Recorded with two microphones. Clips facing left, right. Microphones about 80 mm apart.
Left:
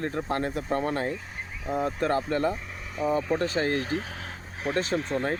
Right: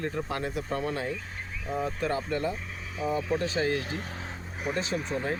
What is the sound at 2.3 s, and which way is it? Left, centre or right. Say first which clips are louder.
Speech: left 4 dB; left.